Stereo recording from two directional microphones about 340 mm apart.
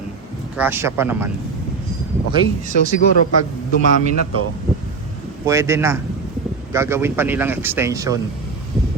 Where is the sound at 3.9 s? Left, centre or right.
Right.